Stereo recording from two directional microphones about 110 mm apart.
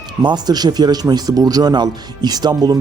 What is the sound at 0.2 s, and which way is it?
A man's voice, 40° right (ahead or behind).